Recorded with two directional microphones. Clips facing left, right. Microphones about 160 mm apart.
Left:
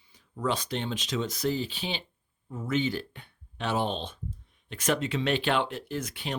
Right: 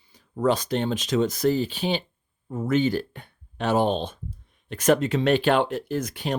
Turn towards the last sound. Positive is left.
turn(degrees=-45)  # may be behind; listen again after turning